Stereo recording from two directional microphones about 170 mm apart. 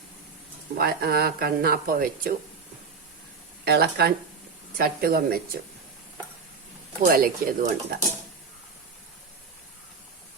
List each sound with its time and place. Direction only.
0.8 s speech: 65° right (ahead or behind)
3.6 s speech: 70° right (ahead or behind)
7.0 s speech: 55° right (ahead or behind)